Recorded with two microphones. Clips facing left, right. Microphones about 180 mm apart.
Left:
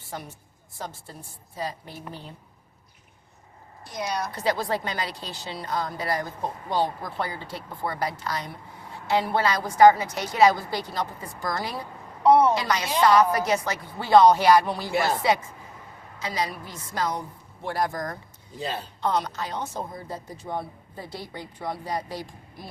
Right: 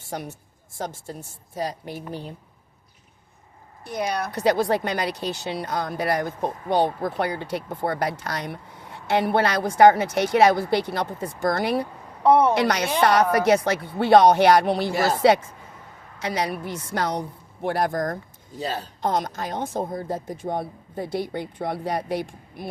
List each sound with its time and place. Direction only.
0.8 s a woman's voice: 45° right (ahead or behind)
1.9 s a woman's voice: 15° right (ahead or behind)
3.8 s a woman's voice: 60° right (ahead or behind)
7.7 s a woman's voice: 45° right (ahead or behind)
7.9 s a woman's voice: 65° right (ahead or behind)